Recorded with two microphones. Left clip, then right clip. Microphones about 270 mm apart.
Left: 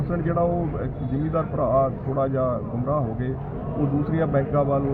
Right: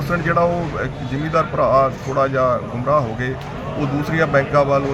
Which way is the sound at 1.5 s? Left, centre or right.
Right.